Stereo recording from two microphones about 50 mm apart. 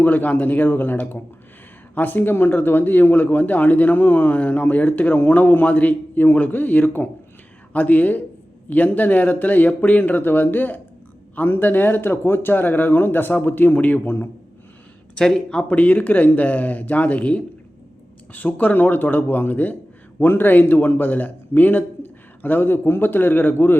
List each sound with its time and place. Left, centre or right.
0.0 s speech: left
15.2 s speech: centre
15.6 s a man's voice: left